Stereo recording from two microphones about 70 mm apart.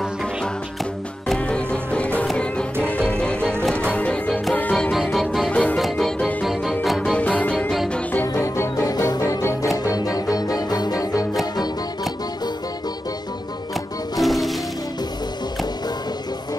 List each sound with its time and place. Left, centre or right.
1.3 s music: centre
4.9 s music: centre
5.5 s music: centre
5.8 s music: centre
7.2 s music: centre
8.4 s music: left
8.8 s music: left
9.2 s music: left
9.9 s music: left
14.1 s music: centre